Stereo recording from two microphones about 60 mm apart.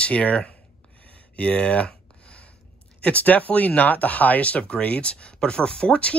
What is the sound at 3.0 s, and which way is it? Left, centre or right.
Speech, left.